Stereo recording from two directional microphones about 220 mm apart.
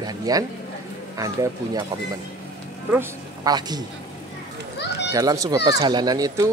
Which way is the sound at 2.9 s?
15° right (ahead or behind).